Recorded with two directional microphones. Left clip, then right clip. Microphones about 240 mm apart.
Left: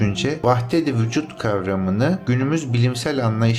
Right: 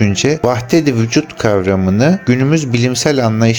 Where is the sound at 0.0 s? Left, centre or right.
Right.